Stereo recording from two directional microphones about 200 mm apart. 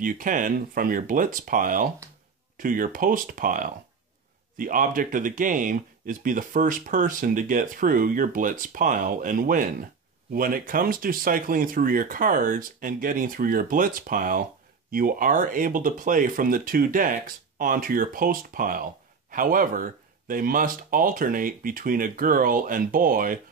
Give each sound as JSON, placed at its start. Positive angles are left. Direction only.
{"t": 0.0, "sound": "speech", "side_deg": -40}